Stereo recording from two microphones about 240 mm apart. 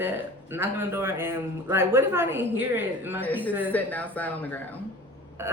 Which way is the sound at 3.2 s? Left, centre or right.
Centre.